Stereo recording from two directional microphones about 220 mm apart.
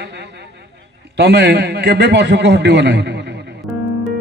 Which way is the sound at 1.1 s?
50° right (ahead or behind).